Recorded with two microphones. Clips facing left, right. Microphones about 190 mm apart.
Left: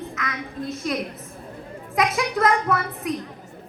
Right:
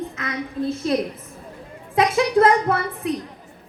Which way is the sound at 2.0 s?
30° right (ahead or behind).